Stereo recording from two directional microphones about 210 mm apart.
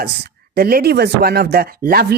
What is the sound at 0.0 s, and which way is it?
Speech, 50° right (ahead or behind).